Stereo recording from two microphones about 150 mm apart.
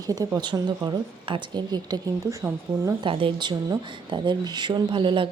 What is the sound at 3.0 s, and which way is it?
A woman's voice, 35° right (ahead or behind).